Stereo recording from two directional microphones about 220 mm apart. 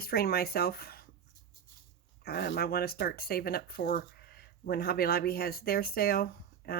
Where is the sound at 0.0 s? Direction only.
45° left (ahead or behind).